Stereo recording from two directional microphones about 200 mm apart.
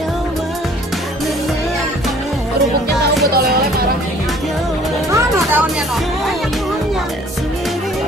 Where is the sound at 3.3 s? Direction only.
50° right (ahead or behind).